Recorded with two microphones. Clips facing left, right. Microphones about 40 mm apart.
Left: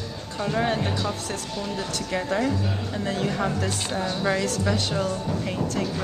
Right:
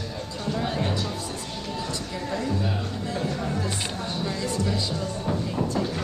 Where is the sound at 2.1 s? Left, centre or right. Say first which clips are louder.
Left 6 dB; left.